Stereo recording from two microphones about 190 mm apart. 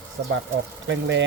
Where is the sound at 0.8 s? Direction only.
70° right (ahead or behind).